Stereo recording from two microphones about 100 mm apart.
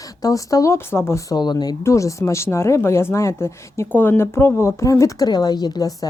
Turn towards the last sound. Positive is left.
turn(degrees=40)  # may be behind; listen again after turning